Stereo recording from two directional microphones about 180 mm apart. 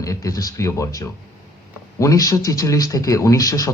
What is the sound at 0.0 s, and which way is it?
A man's voice, 20° left (ahead or behind).